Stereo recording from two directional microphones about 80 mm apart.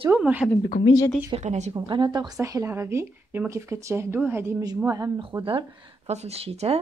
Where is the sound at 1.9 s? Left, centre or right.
Right.